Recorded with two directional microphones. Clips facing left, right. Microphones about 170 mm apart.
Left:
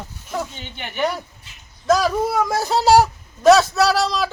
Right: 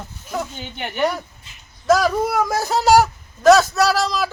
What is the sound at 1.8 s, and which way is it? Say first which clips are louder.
Speech: right 1 dB; 5° right (ahead or behind).